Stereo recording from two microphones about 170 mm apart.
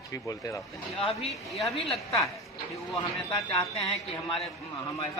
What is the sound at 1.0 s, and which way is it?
Speech, 35° left (ahead or behind).